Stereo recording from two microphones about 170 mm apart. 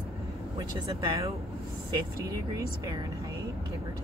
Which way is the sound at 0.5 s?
20° right (ahead or behind).